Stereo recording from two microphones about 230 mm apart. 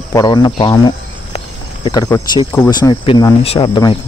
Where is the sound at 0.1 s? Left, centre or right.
Centre.